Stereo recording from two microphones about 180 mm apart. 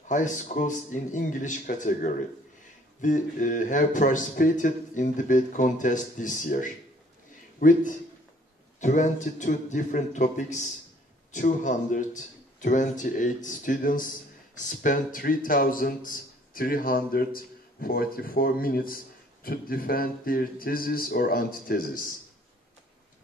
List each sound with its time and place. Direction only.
0.1 s speech: 45° left (ahead or behind)